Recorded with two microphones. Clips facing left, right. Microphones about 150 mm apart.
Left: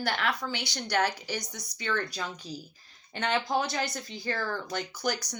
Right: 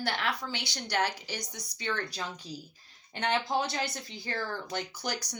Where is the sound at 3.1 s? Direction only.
20° right (ahead or behind).